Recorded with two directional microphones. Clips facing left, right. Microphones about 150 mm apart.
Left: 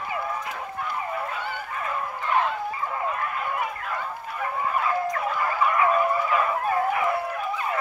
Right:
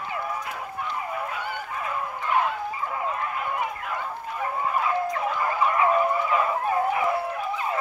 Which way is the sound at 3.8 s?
15° right (ahead or behind).